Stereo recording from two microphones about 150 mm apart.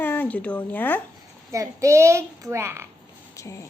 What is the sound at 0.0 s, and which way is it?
Speech, 15° left (ahead or behind).